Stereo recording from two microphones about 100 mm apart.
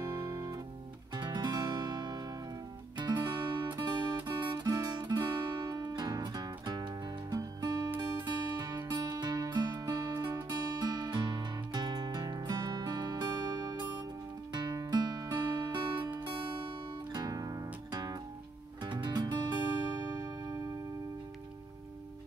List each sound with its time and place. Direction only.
0.0 s music: 40° right (ahead or behind)
17.1 s music: 40° right (ahead or behind)
20.1 s music: 35° right (ahead or behind)